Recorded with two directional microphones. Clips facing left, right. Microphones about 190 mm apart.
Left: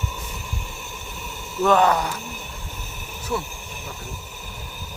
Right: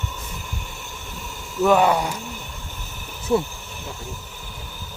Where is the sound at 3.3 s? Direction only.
30° right (ahead or behind).